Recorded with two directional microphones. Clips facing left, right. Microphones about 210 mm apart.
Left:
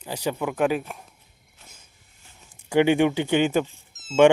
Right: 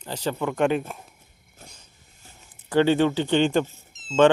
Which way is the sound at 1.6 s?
45° right (ahead or behind).